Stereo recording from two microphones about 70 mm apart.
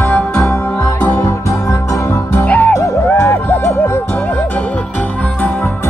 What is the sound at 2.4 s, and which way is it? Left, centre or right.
Music, left.